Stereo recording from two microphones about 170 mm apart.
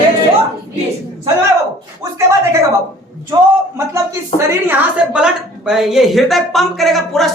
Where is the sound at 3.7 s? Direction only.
20° right (ahead or behind).